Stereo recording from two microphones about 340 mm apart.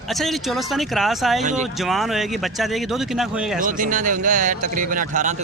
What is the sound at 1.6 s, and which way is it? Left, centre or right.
Speech, centre.